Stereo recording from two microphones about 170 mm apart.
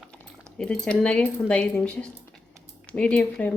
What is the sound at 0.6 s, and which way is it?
Speech, 5° left (ahead or behind).